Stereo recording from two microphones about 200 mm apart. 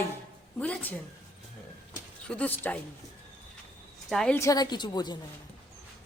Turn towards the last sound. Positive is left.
turn(degrees=20)  # may be behind; listen again after turning